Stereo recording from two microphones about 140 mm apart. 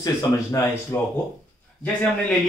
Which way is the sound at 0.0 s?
25° left (ahead or behind).